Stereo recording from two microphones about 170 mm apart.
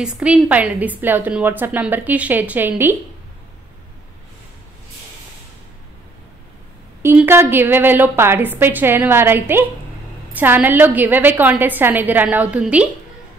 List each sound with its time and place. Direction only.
0.0 s a woman's voice: 5° right (ahead or behind)
7.0 s a woman's voice: 15° right (ahead or behind)